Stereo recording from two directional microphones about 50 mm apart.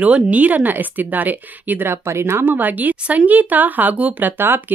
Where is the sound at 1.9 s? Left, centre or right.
Right.